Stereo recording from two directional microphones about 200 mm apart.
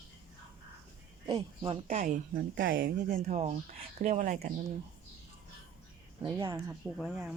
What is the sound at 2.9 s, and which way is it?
Speech, 35° right (ahead or behind).